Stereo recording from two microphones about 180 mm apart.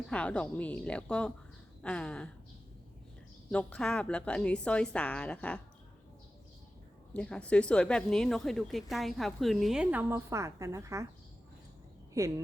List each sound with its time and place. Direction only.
0.1 s speech: 5° left (ahead or behind)
3.5 s speech: 5° left (ahead or behind)
7.1 s speech: 5° left (ahead or behind); by 11.0 s 15° right (ahead or behind)
12.2 s speech: 15° right (ahead or behind)